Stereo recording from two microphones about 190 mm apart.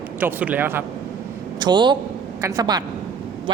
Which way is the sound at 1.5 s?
25° right (ahead or behind).